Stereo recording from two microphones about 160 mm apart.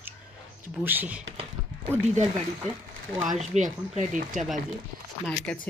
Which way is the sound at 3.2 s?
50° right (ahead or behind).